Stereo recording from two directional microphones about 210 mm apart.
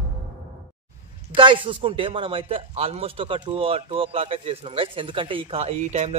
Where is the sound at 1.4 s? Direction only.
25° right (ahead or behind).